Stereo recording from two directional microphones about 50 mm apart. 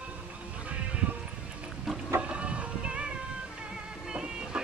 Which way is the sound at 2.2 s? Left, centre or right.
Right.